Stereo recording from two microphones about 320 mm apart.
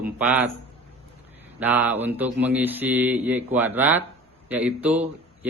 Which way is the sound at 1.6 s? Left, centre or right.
Centre.